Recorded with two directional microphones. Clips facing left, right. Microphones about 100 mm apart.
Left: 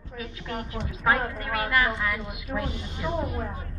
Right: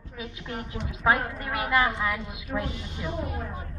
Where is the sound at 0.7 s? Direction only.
20° right (ahead or behind).